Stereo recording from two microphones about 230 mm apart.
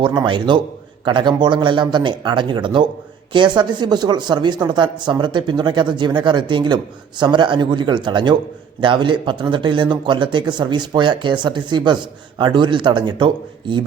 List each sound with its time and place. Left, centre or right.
0.0 s speech: centre